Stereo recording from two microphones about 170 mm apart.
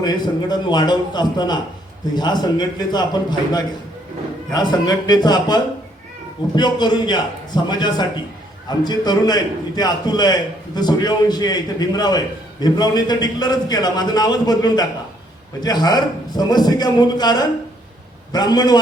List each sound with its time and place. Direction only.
0.0 s a man's voice: 25° left (ahead or behind)